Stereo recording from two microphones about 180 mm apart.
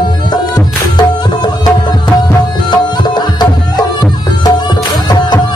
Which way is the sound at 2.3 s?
25° left (ahead or behind).